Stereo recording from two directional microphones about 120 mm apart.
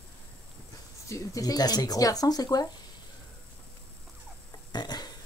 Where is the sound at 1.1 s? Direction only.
30° left (ahead or behind).